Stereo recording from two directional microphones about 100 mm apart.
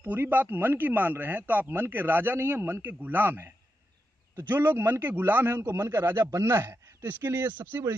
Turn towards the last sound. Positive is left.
turn(degrees=-25)  # may be behind; listen again after turning